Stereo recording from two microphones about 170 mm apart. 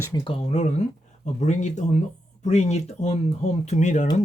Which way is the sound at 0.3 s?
35° left (ahead or behind).